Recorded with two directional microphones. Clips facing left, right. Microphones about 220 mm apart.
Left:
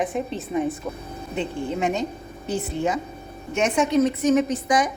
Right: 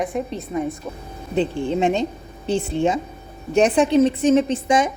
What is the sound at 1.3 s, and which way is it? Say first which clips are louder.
A woman's voice: right 6 dB; 30° right (ahead or behind).